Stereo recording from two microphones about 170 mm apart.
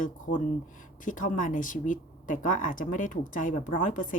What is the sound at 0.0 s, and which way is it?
Speech, 50° left (ahead or behind).